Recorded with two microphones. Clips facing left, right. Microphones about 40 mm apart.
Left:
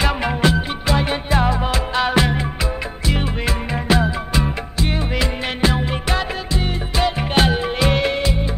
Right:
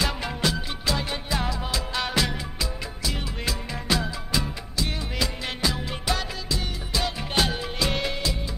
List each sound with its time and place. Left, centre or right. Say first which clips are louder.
0.0 s music: left 8 dB; left